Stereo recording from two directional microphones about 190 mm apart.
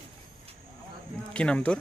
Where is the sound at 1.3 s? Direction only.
5° left (ahead or behind).